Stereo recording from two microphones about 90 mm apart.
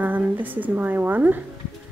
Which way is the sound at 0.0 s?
20° right (ahead or behind).